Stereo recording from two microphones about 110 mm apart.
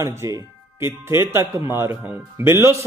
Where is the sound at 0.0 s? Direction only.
25° right (ahead or behind).